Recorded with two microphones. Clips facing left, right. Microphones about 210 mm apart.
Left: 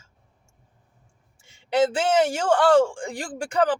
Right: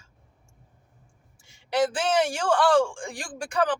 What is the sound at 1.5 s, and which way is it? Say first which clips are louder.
A man's voice: left 3 dB; 25° left (ahead or behind).